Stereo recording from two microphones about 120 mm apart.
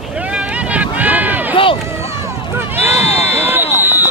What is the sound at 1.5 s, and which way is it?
Run, 45° left (ahead or behind).